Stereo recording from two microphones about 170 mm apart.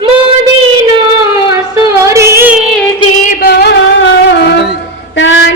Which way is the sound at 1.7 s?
15° right (ahead or behind).